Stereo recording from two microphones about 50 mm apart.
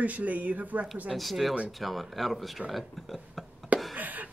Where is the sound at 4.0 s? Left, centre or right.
Right.